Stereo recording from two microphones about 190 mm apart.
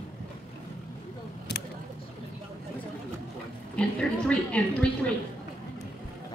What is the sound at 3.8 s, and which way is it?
Speech, 5° left (ahead or behind).